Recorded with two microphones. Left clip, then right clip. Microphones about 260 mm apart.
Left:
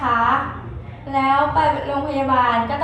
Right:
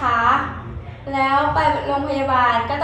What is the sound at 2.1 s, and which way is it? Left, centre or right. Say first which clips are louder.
Speech: even; centre.